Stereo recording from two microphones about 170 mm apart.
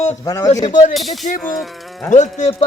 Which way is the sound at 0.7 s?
45° left (ahead or behind).